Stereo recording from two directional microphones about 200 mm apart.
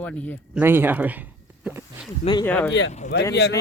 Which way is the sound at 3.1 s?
60° left (ahead or behind).